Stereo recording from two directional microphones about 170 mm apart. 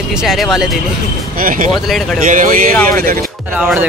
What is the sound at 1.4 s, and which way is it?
Speech, 50° right (ahead or behind).